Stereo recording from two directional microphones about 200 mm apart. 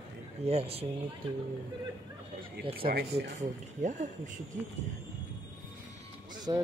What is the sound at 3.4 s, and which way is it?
Speech, 40° right (ahead or behind).